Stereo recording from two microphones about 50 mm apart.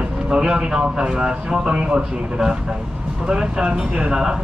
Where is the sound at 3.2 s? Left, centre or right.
Centre.